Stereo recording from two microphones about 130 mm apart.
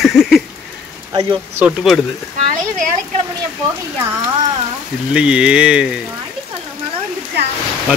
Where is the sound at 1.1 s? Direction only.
30° right (ahead or behind).